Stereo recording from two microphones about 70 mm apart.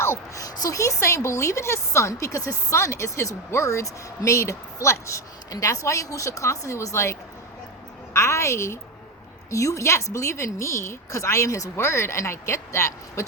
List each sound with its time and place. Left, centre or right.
0.0 s speech: left
0.4 s a woman's voice: left
0.8 s speech: left